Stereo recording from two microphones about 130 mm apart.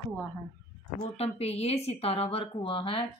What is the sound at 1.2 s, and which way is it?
A woman's voice, 50° left (ahead or behind).